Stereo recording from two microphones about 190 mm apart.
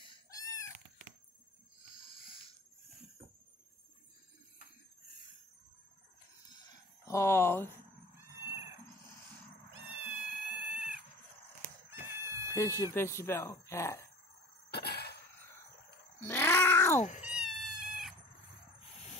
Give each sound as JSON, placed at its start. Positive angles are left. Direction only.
{"t": 0.0, "sound": "chicken", "side_deg": 20}
{"t": 7.1, "sound": "speech", "side_deg": 15}
{"t": 10.0, "sound": "cat", "side_deg": 0}
{"t": 12.2, "sound": "chicken", "side_deg": -15}
{"t": 12.5, "sound": "speech", "side_deg": 15}
{"t": 14.7, "sound": "a sound", "side_deg": 60}
{"t": 16.2, "sound": "cat", "side_deg": 10}
{"t": 17.2, "sound": "cat", "side_deg": -5}